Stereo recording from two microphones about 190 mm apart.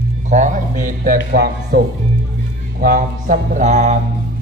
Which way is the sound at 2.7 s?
50° right (ahead or behind).